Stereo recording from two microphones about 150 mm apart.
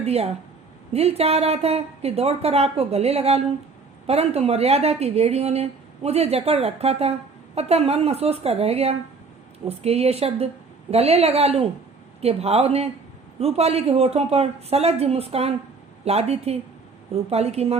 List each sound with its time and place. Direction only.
0.0 s speech: 45° right (ahead or behind)